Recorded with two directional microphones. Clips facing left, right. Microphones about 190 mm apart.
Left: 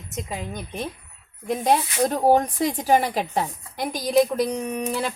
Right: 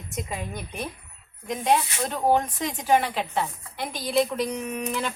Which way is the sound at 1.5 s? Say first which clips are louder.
Left 2 dB; 35° left (ahead or behind).